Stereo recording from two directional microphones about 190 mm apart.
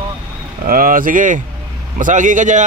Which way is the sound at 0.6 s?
50° right (ahead or behind).